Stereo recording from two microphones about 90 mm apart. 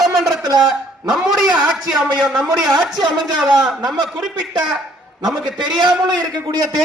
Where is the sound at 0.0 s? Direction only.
5° right (ahead or behind).